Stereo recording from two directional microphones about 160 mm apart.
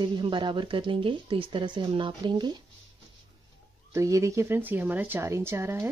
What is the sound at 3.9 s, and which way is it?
A woman's voice, 20° right (ahead or behind).